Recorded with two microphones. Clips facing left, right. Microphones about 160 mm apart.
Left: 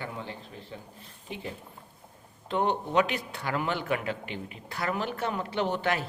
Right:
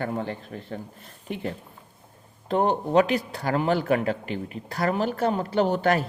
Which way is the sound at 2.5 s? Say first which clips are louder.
Right 5 dB; 40° right (ahead or behind).